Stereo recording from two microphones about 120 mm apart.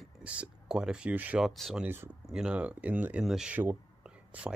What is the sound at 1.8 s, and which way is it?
Speech, 20° right (ahead or behind).